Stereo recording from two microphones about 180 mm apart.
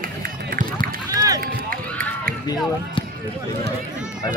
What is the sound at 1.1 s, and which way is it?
Run, 20° right (ahead or behind).